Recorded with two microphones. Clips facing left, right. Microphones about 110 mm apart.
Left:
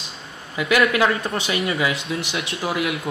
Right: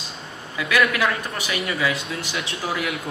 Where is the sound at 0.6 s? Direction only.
25° left (ahead or behind).